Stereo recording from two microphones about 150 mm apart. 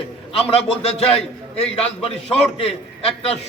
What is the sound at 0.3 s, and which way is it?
A man's voice, 40° left (ahead or behind).